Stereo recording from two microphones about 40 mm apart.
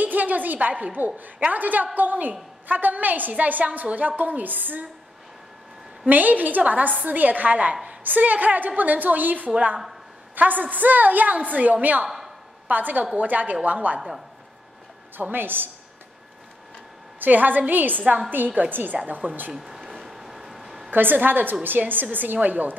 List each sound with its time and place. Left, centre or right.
0.0 s a woman's voice: right
6.0 s a woman's voice: right
12.0 s a sound: centre
12.6 s a woman's voice: right
15.1 s a woman's voice: right
17.2 s a woman's voice: right
19.5 s a sound: centre
20.9 s a woman's voice: right